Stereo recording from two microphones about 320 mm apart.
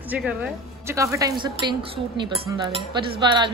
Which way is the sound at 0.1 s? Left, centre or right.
Centre.